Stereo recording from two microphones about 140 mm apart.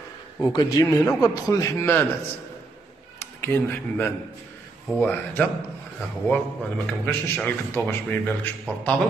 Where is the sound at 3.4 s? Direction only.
15° left (ahead or behind).